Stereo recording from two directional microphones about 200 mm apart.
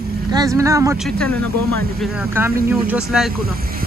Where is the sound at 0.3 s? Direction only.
15° right (ahead or behind).